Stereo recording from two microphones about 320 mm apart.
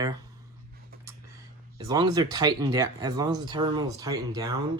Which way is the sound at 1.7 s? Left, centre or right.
Centre.